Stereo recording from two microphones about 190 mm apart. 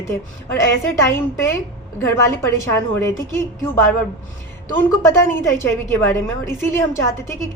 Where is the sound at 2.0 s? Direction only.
15° left (ahead or behind).